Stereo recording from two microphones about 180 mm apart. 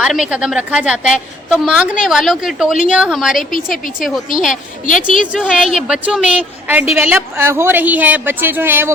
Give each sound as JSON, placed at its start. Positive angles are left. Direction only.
{"t": 0.0, "sound": "a woman's voice", "side_deg": -5}
{"t": 4.9, "sound": "a woman's voice", "side_deg": 45}
{"t": 5.3, "sound": "a woman's voice", "side_deg": 0}